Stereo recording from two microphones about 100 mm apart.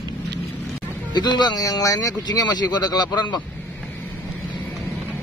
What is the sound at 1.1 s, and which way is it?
Speech, 45° left (ahead or behind).